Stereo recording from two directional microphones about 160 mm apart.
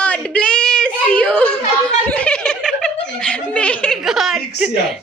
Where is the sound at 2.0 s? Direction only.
10° left (ahead or behind).